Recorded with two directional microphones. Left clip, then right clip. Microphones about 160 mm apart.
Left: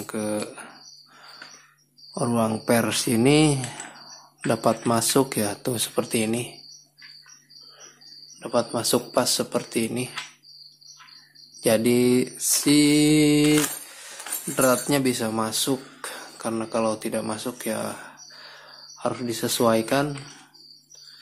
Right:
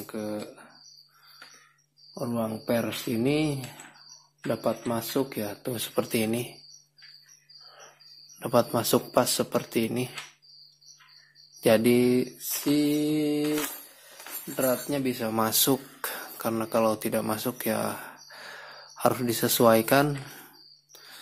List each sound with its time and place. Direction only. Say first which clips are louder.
0.0 s speech: left 6 dB; centre (ahead or behind)
2.1 s speech: left 7 dB; 10° left (ahead or behind)
5.9 s mantra: even; 10° right (ahead or behind)
8.4 s speech: even; 30° right (ahead or behind)
11.6 s mantra: left 1 dB; 20° right (ahead or behind); by 12.7 s 5° right (ahead or behind)
12.7 s speech: left 7 dB; 5° left (ahead or behind)
14.5 s speech: left 6 dB; 5° left (ahead or behind)
15.3 s speech: even; 25° right (ahead or behind)